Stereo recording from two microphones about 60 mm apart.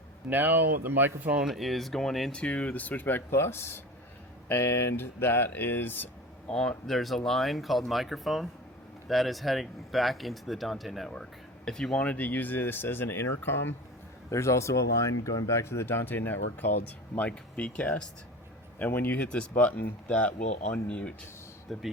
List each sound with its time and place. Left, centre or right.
0.3 s speech: right
1.5 s speech: centre
2.3 s speech: left
6.5 s speech: centre
11.1 s speech: centre
12.0 s speech: left
14.3 s speech: left
17.2 s speech: left
18.8 s speech: left; by 21.1 s centre
21.7 s speech: centre